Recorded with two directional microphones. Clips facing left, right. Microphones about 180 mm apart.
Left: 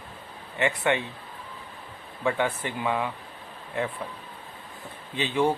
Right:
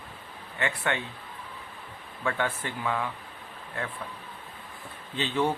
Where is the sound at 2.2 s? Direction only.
15° left (ahead or behind).